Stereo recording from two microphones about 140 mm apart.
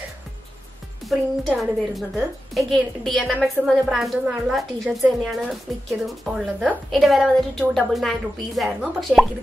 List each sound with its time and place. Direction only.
1.0 s music: centre (ahead or behind)
1.6 s a woman's voice: centre (ahead or behind)